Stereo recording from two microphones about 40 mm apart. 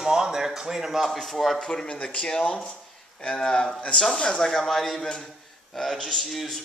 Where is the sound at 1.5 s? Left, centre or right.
Centre.